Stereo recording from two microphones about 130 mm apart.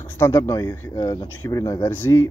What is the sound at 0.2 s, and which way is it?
Speech, 20° left (ahead or behind).